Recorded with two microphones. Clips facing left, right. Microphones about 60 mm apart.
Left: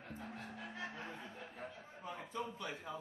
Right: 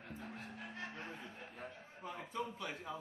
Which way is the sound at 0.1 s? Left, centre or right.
Centre.